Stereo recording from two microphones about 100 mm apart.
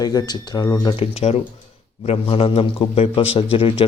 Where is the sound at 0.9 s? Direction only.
85° left; by 3.8 s 65° left (ahead or behind).